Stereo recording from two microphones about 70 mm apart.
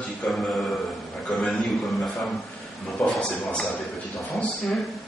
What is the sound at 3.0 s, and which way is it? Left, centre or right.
Speech, centre.